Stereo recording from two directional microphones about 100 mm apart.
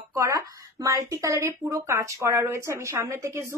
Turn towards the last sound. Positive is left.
turn(degrees=-25)  # may be behind; listen again after turning